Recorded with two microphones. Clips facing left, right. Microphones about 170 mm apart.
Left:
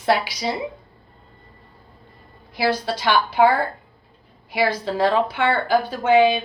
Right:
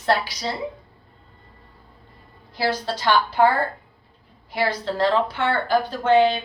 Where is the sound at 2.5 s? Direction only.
10° left (ahead or behind).